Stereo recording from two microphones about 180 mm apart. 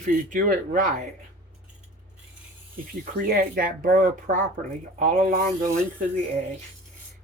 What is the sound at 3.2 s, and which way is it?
Speech, 55° right (ahead or behind).